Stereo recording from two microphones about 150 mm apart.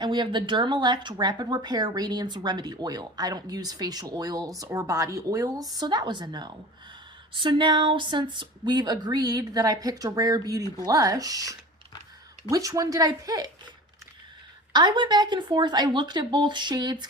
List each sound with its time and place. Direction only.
0.0 s speech: 30° right (ahead or behind)
14.7 s speech: 30° right (ahead or behind)